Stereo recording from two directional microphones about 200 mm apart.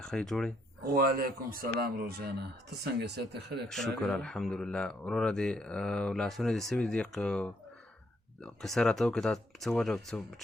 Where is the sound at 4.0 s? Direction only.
5° left (ahead or behind).